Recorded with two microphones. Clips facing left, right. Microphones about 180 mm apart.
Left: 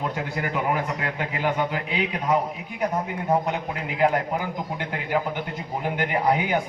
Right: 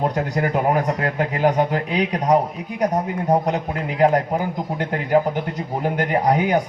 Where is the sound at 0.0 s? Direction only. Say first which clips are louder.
Right 7 dB; 45° right (ahead or behind).